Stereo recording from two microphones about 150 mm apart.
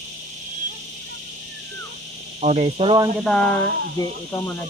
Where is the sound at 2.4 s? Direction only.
50° right (ahead or behind).